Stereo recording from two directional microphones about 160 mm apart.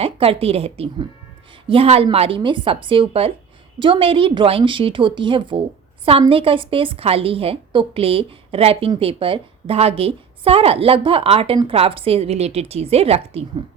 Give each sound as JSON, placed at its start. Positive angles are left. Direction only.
{"t": 0.0, "sound": "a woman's voice", "side_deg": -35}